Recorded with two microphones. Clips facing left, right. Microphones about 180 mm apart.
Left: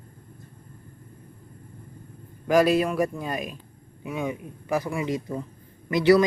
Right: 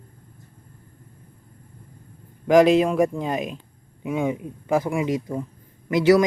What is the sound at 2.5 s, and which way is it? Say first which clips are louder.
Speech: right 5 dB; 20° right (ahead or behind).